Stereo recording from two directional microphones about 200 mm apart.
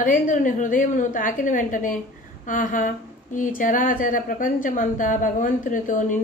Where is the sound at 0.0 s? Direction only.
40° left (ahead or behind).